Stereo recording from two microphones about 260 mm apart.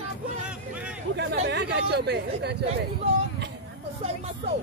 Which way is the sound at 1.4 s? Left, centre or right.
Right.